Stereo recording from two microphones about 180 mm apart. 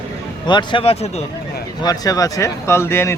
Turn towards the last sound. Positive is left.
turn(degrees=15)  # may be behind; listen again after turning